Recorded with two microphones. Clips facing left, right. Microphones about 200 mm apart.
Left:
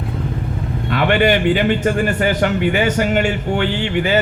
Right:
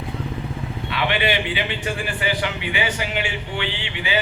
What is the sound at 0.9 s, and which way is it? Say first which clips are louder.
A man's voice: left 8 dB; 50° left (ahead or behind).